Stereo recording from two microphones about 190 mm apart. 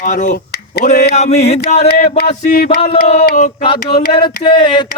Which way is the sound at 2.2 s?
55° left (ahead or behind).